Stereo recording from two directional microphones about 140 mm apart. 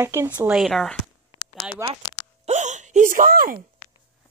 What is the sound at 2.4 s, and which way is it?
Hiccup, 60° right (ahead or behind).